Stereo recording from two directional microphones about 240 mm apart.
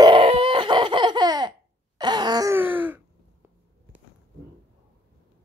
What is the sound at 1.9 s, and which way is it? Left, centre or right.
Groan, centre.